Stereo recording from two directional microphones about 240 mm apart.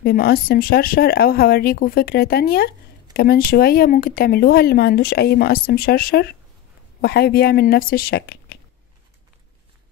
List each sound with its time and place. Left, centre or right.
0.0 s speech: left